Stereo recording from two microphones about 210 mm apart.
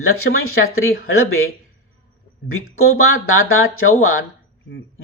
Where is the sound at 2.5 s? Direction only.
85° left.